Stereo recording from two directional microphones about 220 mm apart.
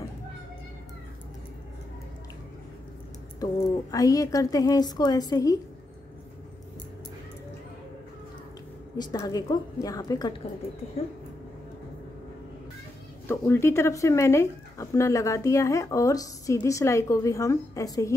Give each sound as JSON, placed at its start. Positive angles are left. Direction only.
{"t": 3.9, "sound": "speech", "side_deg": 15}
{"t": 8.9, "sound": "speech", "side_deg": 15}
{"t": 13.3, "sound": "speech", "side_deg": 10}